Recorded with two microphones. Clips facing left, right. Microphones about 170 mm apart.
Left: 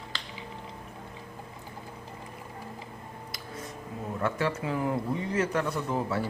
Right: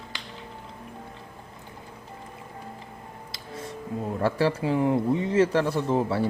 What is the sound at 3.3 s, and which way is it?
Music, 30° right (ahead or behind).